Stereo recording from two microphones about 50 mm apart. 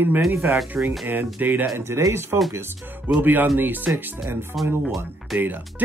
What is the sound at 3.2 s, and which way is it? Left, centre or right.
Speech, right.